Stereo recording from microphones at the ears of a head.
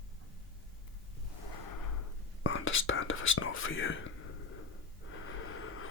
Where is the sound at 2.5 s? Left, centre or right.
Left.